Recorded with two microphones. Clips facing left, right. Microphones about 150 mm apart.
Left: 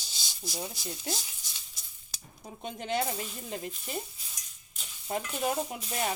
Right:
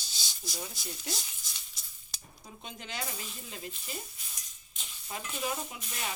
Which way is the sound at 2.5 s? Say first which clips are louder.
Left 10 dB; 55° left (ahead or behind).